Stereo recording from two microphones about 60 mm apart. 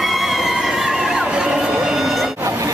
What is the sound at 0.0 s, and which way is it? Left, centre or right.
Crowd, centre.